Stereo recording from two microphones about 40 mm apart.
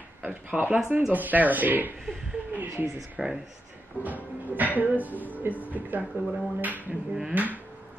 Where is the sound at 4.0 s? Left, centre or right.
Right.